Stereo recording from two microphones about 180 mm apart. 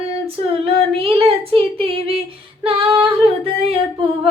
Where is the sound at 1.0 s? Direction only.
30° right (ahead or behind).